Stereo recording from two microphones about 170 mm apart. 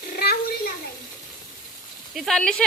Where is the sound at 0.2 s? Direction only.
65° left (ahead or behind).